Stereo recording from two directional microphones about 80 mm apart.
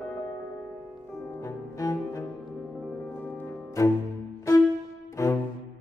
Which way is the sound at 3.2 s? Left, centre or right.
Left.